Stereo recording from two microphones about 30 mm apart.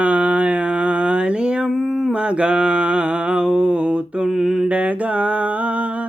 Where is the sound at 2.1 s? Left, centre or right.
Right.